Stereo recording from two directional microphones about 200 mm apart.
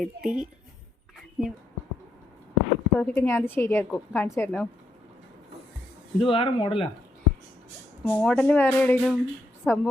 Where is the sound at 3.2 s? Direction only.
10° left (ahead or behind).